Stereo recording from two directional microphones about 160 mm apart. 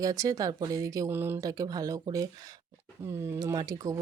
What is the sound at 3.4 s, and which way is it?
Speech, 20° right (ahead or behind).